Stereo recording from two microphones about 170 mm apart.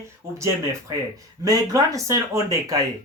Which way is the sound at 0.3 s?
15° right (ahead or behind).